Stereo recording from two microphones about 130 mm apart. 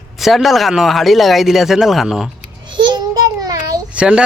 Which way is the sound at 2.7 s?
35° right (ahead or behind).